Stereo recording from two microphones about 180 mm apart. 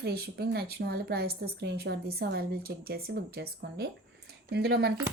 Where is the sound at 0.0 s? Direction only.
60° right (ahead or behind).